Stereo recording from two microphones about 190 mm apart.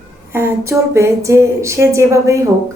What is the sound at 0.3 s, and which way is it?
Speech, 15° right (ahead or behind).